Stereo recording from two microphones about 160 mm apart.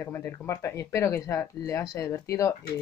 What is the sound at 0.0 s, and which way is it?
Speech, 20° left (ahead or behind).